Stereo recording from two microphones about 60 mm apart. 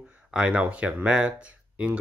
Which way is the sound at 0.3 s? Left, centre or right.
Centre.